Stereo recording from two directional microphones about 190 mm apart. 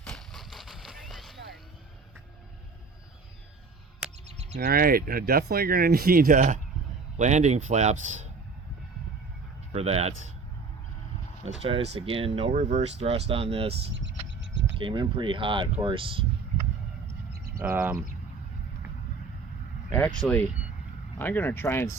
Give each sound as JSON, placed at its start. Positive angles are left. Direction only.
{"t": 0.0, "sound": "a sound", "side_deg": 0}
{"t": 4.5, "sound": "speech", "side_deg": -55}
{"t": 9.7, "sound": "speech", "side_deg": -35}
{"t": 11.6, "sound": "speech", "side_deg": -30}
{"t": 13.9, "sound": "a sound", "side_deg": -70}
{"t": 14.8, "sound": "speech", "side_deg": -25}
{"t": 17.6, "sound": "speech", "side_deg": -10}
{"t": 20.2, "sound": "speech", "side_deg": 10}